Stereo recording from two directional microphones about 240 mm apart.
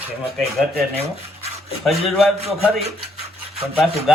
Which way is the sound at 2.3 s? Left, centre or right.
Right.